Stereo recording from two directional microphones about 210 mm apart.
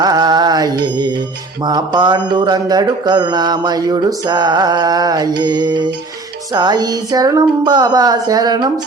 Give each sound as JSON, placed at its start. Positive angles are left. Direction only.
{"t": 0.0, "sound": "mantra", "side_deg": -20}
{"t": 1.6, "sound": "music", "side_deg": -20}